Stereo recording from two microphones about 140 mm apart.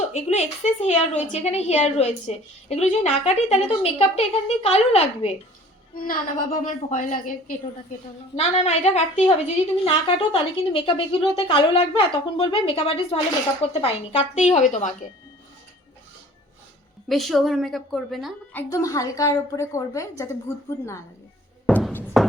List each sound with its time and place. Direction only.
0.1 s a woman's voice: 50° left (ahead or behind)
6.0 s a woman's voice: 90° left; by 7.6 s 75° left (ahead or behind)
8.4 s a woman's voice: 50° left (ahead or behind)
9.8 s a woman's voice: 35° left (ahead or behind); by 14.9 s 60° left (ahead or behind)
17.1 s a woman's voice: centre (ahead or behind)
18.5 s a woman's voice: 20° left (ahead or behind)
22.2 s music: centre (ahead or behind)